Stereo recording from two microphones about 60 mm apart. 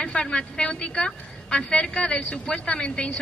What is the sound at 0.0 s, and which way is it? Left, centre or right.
A woman's voice, centre.